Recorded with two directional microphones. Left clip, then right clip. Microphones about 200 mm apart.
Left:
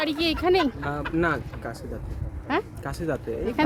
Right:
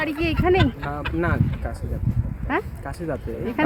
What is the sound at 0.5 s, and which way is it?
Speech, 5° right (ahead or behind).